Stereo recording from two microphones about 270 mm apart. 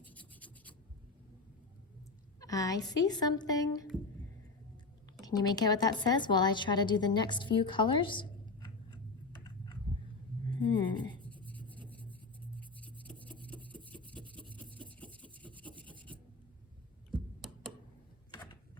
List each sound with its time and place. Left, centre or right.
0.0 s rub: centre
2.4 s a woman's voice: centre
5.2 s a woman's voice: centre
12.4 s writing: centre
13.4 s rub: centre
17.4 s tick: centre